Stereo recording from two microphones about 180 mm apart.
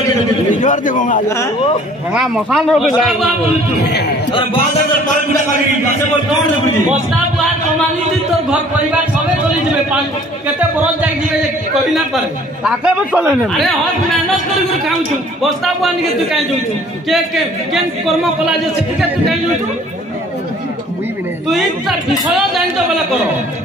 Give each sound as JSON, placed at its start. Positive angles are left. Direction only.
{"t": 0.6, "sound": "a man's voice", "side_deg": 45}
{"t": 2.1, "sound": "speech", "side_deg": -5}
{"t": 12.6, "sound": "speech", "side_deg": -5}
{"t": 15.4, "sound": "speech", "side_deg": 0}
{"t": 18.0, "sound": "speech", "side_deg": 0}
{"t": 21.5, "sound": "speech", "side_deg": 0}